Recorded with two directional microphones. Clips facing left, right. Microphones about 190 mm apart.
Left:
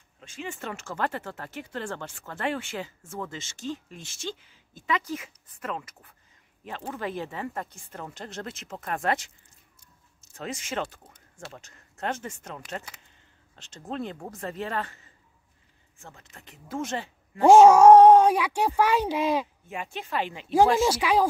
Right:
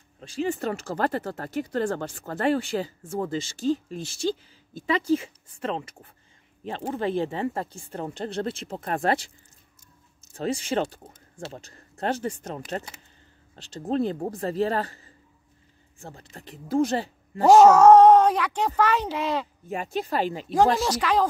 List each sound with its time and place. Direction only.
0.2 s speech: 35° right (ahead or behind)
10.3 s speech: 35° right (ahead or behind)
17.6 s speech: 10° left (ahead or behind)
19.7 s speech: 40° right (ahead or behind)
20.8 s speech: 10° left (ahead or behind)